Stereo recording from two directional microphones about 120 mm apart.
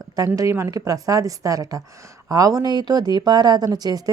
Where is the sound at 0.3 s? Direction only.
25° right (ahead or behind).